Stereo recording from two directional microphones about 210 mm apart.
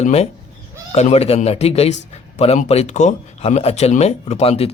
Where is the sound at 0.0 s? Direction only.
30° left (ahead or behind).